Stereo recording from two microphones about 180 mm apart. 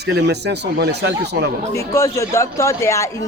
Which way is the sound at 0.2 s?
70° right (ahead or behind).